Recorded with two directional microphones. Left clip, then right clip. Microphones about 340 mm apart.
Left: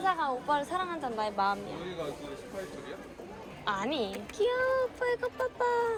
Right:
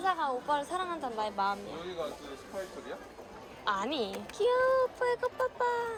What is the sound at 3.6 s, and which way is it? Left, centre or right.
A woman's voice, centre.